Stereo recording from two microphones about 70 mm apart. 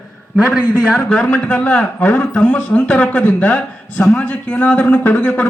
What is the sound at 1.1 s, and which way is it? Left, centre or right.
A man's voice, centre.